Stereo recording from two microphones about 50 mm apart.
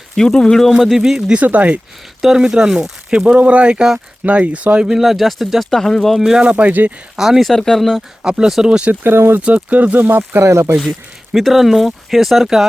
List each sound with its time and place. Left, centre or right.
0.2 s speech: centre
0.8 s speech: centre
1.5 s speech: right
2.2 s speech: centre; by 4.9 s right
4.9 s speech: centre
6.3 s speech: right
7.2 s speech: centre
7.5 s speech: centre
8.2 s speech: centre
8.9 s speech: right
9.6 s speech: right
10.4 s speech: right
10.8 s speech: centre